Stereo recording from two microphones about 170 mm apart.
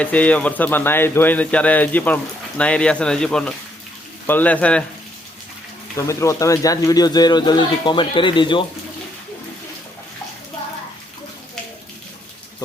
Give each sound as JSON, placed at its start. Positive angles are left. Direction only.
{"t": 0.0, "sound": "speech", "side_deg": 10}
{"t": 6.1, "sound": "speech", "side_deg": 15}